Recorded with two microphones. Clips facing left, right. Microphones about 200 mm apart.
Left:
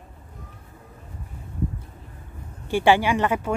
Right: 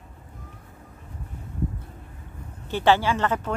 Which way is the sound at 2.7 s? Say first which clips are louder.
Left 2 dB; 15° left (ahead or behind).